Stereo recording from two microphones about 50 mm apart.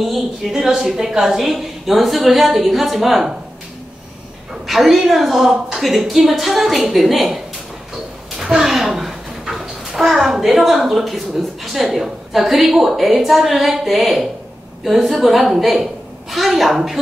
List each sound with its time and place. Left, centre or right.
0.0 s a woman's voice: centre
0.5 s a woman's voice: centre
4.6 s a woman's voice: centre
8.4 s a child's voice: centre